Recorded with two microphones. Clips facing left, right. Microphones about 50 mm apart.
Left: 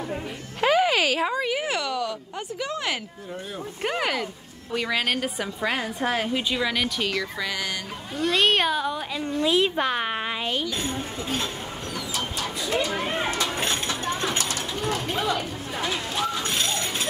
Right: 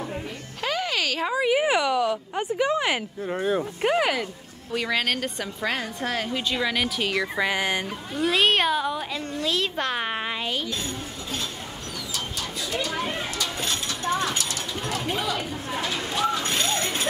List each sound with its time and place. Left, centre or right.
0.6 s music: centre
1.3 s speech: centre
3.3 s speech: right
3.8 s a woman's voice: centre
6.5 s speech: centre
7.1 s speech: right
8.2 s speech: centre
9.2 s a woman's voice: centre
9.8 s speech: centre
12.7 s speech: centre
13.2 s a sound: left
15.0 s a sound: centre
16.3 s a sound: centre